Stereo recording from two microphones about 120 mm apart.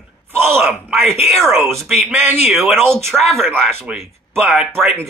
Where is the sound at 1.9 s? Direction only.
15° right (ahead or behind).